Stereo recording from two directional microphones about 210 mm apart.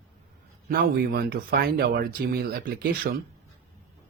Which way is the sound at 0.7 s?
45° right (ahead or behind).